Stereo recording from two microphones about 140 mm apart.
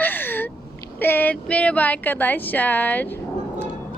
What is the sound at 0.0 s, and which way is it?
Gasp, 15° left (ahead or behind).